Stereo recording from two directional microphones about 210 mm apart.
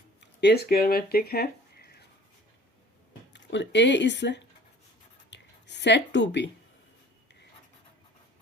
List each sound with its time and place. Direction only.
0.2 s speech: 50° left (ahead or behind)
3.3 s speech: 60° left (ahead or behind)
5.3 s a sound: 55° left (ahead or behind)